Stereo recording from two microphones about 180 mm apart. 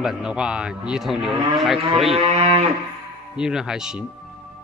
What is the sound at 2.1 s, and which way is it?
Livestock, 30° right (ahead or behind).